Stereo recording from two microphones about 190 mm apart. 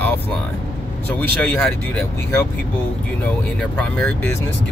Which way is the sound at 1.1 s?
10° left (ahead or behind).